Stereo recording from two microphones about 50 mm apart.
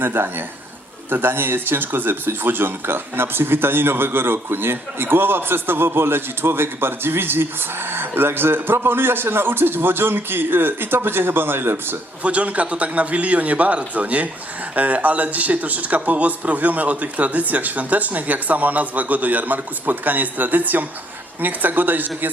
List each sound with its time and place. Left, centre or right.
0.0 s speech: right
12.2 s a man's voice: right